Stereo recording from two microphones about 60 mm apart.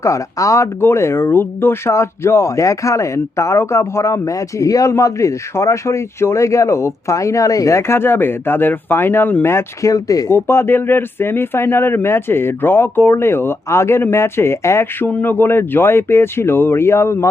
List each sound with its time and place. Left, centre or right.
0.0 s speech: left
0.8 s speech: left
9.8 s speech: left
10.3 s speech: left
15.2 s speech: left